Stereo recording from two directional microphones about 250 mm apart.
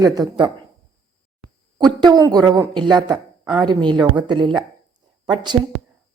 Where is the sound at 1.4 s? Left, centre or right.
Right.